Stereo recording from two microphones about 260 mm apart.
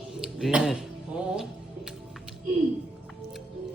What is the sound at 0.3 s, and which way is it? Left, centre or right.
Speech, centre.